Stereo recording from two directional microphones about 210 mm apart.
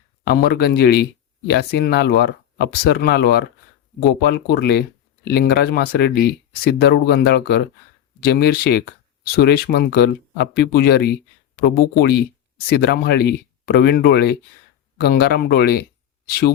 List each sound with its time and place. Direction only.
0.3 s speech: 50° left (ahead or behind)